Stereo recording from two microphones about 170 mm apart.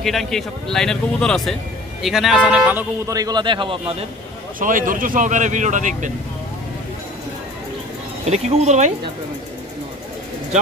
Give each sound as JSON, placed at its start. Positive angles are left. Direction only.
{"t": 0.0, "sound": "speech", "side_deg": 0}
{"t": 3.2, "sound": "a man's voice", "side_deg": -25}
{"t": 4.6, "sound": "speech", "side_deg": -55}
{"t": 8.3, "sound": "speech", "side_deg": -40}